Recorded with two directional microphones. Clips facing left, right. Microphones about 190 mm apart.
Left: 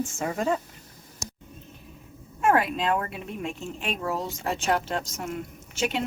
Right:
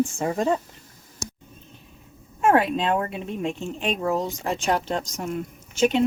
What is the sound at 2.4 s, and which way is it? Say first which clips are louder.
Speech: right 3 dB; 30° right (ahead or behind).